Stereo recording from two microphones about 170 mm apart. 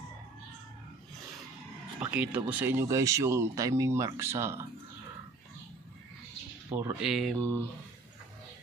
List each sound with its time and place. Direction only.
2.0 s speech: 10° right (ahead or behind)
6.7 s speech: 15° right (ahead or behind)
7.0 s mantra: centre (ahead or behind)